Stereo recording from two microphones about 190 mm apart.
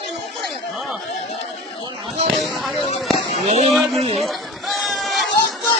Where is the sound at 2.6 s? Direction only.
Centre (ahead or behind).